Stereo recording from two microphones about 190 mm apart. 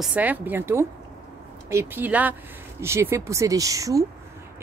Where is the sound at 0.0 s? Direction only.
5° right (ahead or behind).